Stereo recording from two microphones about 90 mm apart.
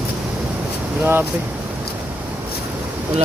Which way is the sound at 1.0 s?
25° right (ahead or behind).